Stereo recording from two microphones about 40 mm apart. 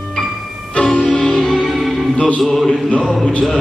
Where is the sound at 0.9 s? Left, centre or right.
Centre.